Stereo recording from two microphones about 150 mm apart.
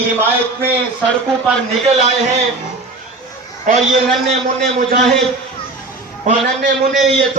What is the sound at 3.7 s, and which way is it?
Speech, 60° right (ahead or behind).